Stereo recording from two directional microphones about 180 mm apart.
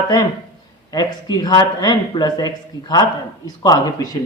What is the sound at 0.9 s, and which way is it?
A man's voice, 20° left (ahead or behind).